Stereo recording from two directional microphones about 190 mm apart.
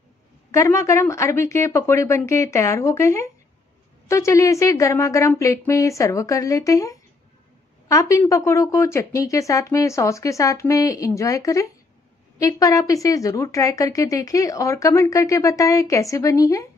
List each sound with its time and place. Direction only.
0.5 s a woman's voice: 15° left (ahead or behind)